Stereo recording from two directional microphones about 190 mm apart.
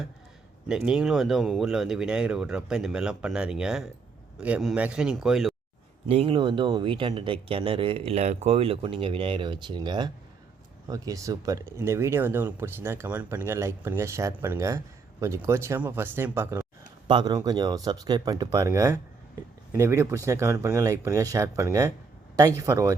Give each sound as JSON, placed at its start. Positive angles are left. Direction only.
{"t": 0.7, "sound": "speech", "side_deg": -5}
{"t": 6.1, "sound": "speech", "side_deg": -30}